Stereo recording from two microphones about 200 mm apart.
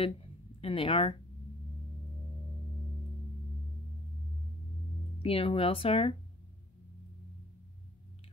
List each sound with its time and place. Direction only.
0.0 s speech: 30° left (ahead or behind)
5.2 s speech: 30° left (ahead or behind)